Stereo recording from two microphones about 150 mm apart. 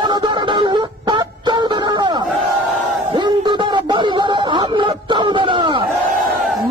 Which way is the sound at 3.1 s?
30° right (ahead or behind).